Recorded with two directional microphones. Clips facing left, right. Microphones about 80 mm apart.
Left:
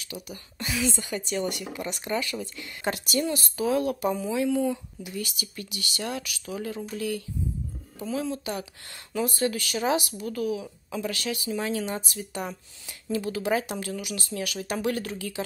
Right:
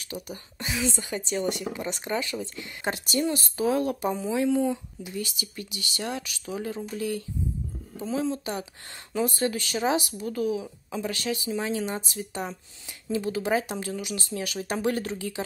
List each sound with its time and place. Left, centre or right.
0.0 s speech: right
0.6 s speech: right